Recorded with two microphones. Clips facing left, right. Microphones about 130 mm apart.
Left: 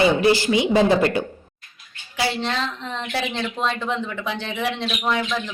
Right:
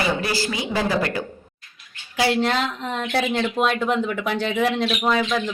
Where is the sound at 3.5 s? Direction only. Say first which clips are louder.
Right 4 dB; 10° right (ahead or behind).